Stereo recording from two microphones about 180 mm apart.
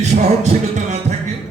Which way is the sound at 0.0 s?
35° right (ahead or behind).